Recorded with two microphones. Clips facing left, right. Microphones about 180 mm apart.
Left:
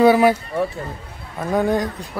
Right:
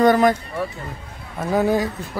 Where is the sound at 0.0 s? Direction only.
10° left (ahead or behind).